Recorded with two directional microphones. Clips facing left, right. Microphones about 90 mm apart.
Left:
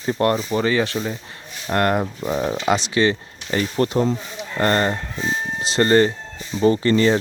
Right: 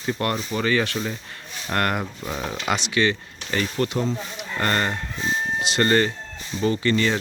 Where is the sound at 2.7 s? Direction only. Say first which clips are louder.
Left 3 dB; 30° left (ahead or behind).